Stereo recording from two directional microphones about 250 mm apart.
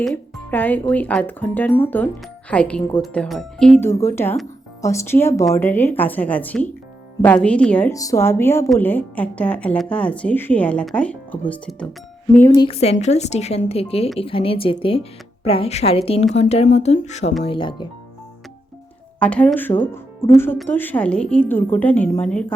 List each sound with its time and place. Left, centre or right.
0.0 s speech: centre
12.5 s a woman's voice: left
19.2 s speech: centre